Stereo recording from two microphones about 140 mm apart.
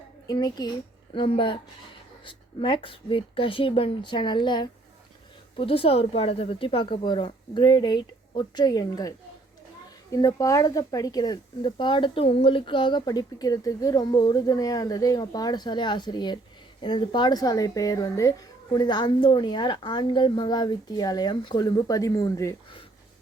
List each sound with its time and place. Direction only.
0.3 s a woman's voice: 30° left (ahead or behind)
5.5 s a woman's voice: 40° left (ahead or behind); by 22.5 s 25° left (ahead or behind)